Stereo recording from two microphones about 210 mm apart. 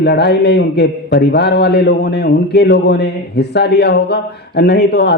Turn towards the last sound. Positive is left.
turn(degrees=55)  # may be behind; listen again after turning